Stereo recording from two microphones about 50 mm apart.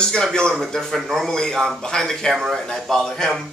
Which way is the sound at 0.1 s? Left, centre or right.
Centre.